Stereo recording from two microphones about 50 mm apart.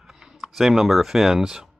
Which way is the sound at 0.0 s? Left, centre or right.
Centre.